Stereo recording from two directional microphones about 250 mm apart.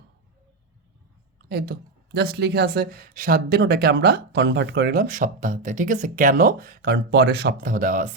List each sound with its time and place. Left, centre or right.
1.5 s speech: right